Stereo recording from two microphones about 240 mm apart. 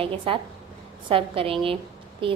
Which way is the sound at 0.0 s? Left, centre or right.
Right.